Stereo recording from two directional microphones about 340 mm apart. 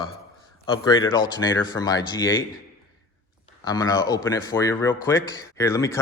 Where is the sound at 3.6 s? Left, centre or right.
Centre.